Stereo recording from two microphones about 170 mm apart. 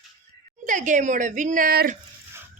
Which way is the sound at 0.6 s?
50° right (ahead or behind).